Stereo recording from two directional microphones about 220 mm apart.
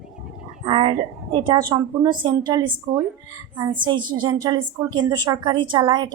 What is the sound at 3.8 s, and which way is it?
A woman's voice, 20° right (ahead or behind).